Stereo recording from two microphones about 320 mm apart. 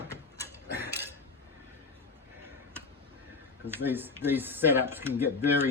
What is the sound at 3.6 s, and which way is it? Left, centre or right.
Speech, centre.